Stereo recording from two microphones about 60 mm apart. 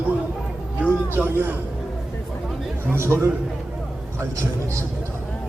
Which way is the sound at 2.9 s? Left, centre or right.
Right.